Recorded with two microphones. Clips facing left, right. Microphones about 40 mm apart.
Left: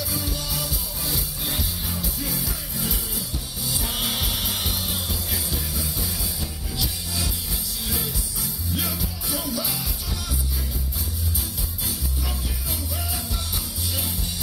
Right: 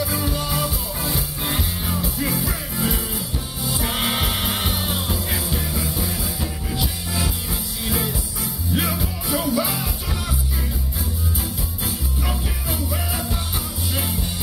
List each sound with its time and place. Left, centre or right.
0.0 s music: right
12.3 s music: right